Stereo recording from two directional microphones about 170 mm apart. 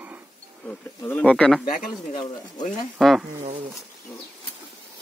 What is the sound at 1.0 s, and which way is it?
Speech, 10° left (ahead or behind).